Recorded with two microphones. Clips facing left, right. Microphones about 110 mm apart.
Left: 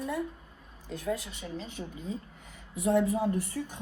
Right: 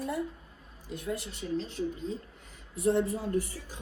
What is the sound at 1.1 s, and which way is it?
Speech, 75° right (ahead or behind).